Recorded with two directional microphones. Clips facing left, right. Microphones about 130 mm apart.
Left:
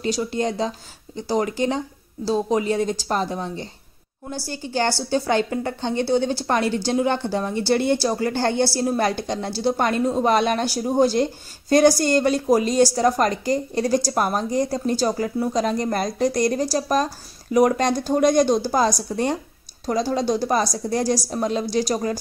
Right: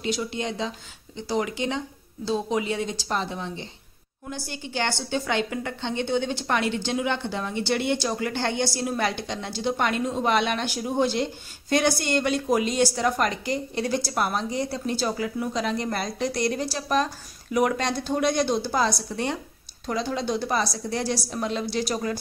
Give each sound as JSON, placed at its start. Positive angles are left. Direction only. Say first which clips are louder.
{"t": 0.0, "sound": "a woman's voice", "louder": "left 5 dB", "side_deg": 40}